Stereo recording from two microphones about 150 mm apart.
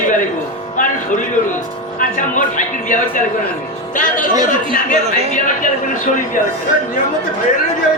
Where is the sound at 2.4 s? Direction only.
60° left (ahead or behind).